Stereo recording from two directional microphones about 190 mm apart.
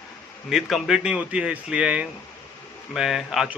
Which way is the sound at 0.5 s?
Centre (ahead or behind).